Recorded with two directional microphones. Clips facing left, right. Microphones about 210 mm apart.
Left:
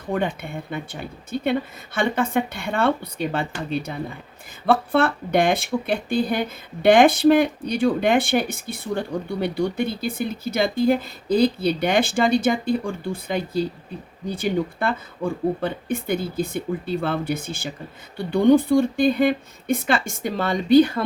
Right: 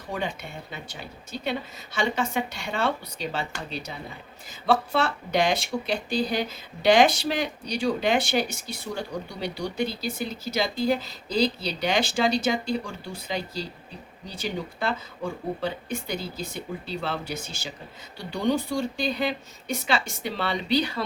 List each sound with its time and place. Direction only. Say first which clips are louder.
0.1 s speech: left 7 dB; 55° left (ahead or behind)